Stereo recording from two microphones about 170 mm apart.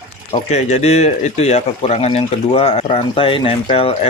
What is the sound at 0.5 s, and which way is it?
Speech, 40° left (ahead or behind).